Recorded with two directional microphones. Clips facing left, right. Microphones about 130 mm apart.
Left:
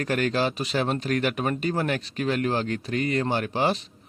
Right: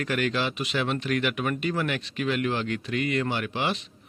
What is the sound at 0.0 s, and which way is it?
Speech, 40° left (ahead or behind).